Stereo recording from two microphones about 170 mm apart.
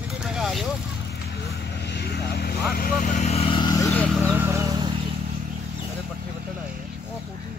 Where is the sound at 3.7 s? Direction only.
20° left (ahead or behind).